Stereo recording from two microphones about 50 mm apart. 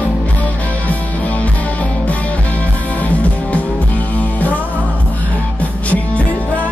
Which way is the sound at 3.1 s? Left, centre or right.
Left.